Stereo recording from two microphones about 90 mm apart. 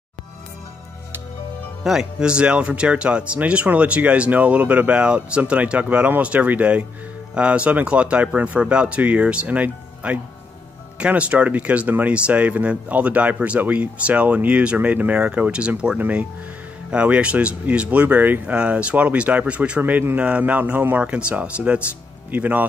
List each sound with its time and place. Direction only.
1.8 s speech: 5° right (ahead or behind)
19.8 s speech: 25° right (ahead or behind)